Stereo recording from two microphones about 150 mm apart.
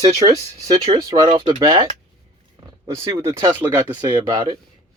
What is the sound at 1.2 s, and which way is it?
Speech, 35° right (ahead or behind).